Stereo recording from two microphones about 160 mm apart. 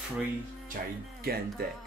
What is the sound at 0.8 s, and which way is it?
Speech, 60° right (ahead or behind).